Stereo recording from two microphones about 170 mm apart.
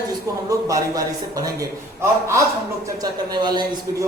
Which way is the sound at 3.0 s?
25° right (ahead or behind).